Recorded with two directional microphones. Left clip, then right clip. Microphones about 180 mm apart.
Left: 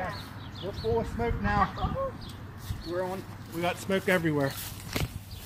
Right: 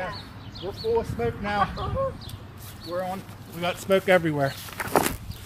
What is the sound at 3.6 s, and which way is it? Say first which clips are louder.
Speech: right 6 dB; 40° right (ahead or behind).